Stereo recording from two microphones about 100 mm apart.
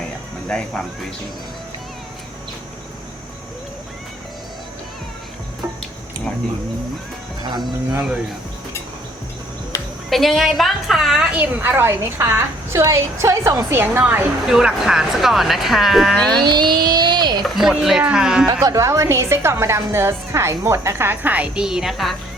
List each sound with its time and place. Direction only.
0.4 s speech: 5° left (ahead or behind)
10.1 s speech: centre (ahead or behind)
11.3 s a woman's voice: 20° right (ahead or behind); by 13.7 s 35° right (ahead or behind)
13.7 s a woman's voice: 25° right (ahead or behind)
14.4 s speech: 5° right (ahead or behind)
16.1 s a sound: 10° left (ahead or behind)
16.4 s a sound: 45° right (ahead or behind)
17.4 s speech: 5° right (ahead or behind)
18.4 s a woman's voice: 35° right (ahead or behind); by 22.1 s centre (ahead or behind)